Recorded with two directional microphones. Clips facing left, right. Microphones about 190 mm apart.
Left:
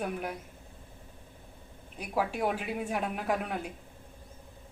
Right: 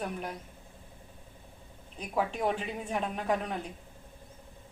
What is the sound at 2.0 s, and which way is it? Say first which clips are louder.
Speech: even; 10° left (ahead or behind).